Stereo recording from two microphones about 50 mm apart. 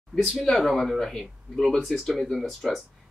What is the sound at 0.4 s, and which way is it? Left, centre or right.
Speech, centre.